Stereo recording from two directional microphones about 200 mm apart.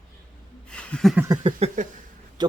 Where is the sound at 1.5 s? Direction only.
30° right (ahead or behind).